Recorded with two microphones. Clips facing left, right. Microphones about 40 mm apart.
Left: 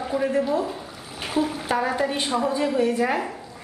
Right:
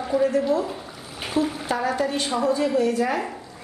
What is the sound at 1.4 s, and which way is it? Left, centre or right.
A woman's voice, centre.